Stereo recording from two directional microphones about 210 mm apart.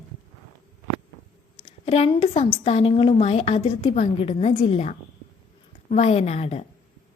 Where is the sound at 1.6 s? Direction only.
30° left (ahead or behind).